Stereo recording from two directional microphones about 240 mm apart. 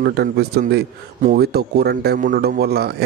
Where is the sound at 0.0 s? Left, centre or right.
Right.